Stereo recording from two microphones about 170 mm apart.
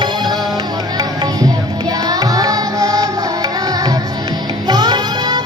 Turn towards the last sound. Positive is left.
turn(degrees=-25)  # may be behind; listen again after turning